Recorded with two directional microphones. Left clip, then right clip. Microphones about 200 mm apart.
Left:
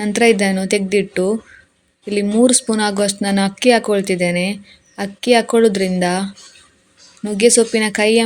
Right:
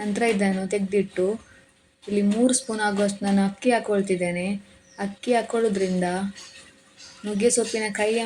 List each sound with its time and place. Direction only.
0.0 s speech: 50° left (ahead or behind)
7.3 s speech: 50° left (ahead or behind)